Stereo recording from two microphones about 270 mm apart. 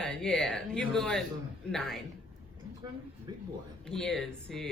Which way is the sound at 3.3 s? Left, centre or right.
Centre.